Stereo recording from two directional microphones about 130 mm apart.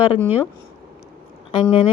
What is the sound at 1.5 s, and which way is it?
Speech, 45° left (ahead or behind).